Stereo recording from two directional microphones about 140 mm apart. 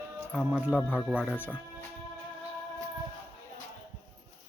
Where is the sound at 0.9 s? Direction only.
5° right (ahead or behind).